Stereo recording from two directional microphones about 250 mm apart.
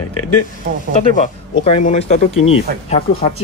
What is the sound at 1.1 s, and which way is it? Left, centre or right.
Speech, left.